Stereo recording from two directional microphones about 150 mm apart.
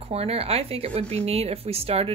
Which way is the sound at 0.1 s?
40° right (ahead or behind).